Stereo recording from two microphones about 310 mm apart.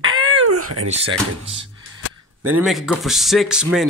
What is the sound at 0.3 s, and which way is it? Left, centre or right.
Cat, right.